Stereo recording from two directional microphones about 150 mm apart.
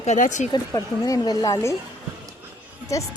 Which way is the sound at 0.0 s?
50° left (ahead or behind).